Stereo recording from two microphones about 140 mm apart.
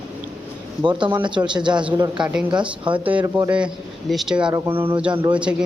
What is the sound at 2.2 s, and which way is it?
Speech, 5° right (ahead or behind).